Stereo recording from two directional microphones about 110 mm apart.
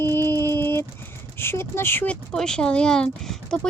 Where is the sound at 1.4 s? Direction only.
20° left (ahead or behind).